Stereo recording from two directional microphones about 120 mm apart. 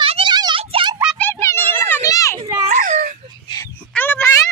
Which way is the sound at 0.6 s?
50° right (ahead or behind).